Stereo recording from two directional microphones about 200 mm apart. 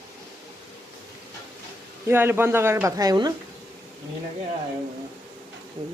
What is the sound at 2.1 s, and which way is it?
Speech, 10° right (ahead or behind).